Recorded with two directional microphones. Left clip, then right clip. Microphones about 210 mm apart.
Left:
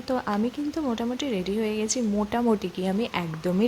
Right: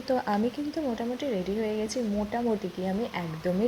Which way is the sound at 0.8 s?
20° left (ahead or behind).